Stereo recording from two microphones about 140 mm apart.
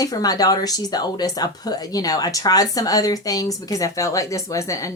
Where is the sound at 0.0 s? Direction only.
25° left (ahead or behind).